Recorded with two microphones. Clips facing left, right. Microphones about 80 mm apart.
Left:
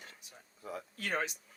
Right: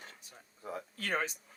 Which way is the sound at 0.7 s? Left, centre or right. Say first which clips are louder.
Right 1 dB; right.